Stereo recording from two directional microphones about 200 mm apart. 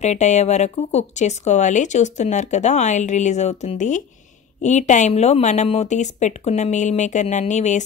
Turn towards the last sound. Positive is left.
turn(degrees=35)  # may be behind; listen again after turning